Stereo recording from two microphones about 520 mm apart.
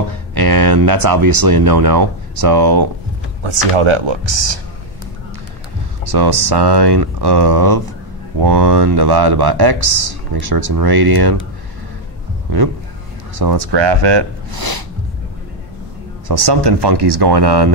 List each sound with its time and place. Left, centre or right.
0.1 s speech: right
3.4 s speech: right
6.0 s speech: right
13.4 s speech: right
16.3 s speech: right